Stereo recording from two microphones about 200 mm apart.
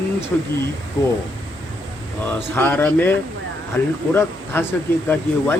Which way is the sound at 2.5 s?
10° left (ahead or behind).